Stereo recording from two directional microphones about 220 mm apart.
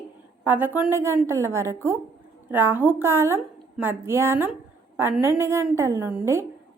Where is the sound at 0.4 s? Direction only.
10° right (ahead or behind).